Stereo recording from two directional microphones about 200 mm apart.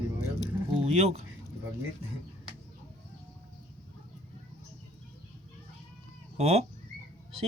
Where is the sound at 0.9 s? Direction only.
30° right (ahead or behind).